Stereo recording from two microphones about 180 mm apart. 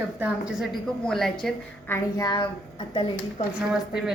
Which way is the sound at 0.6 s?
Centre (ahead or behind).